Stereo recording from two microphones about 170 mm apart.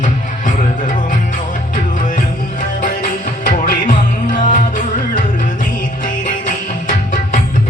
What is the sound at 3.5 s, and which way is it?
Music, 50° left (ahead or behind).